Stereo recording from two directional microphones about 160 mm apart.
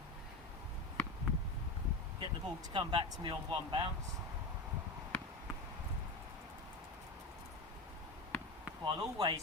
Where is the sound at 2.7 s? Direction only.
30° right (ahead or behind).